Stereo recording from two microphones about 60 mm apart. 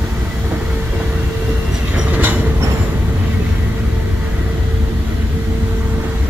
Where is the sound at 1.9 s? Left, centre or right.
Right.